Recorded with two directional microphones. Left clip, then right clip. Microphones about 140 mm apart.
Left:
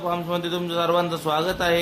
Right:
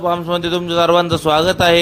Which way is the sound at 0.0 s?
40° right (ahead or behind).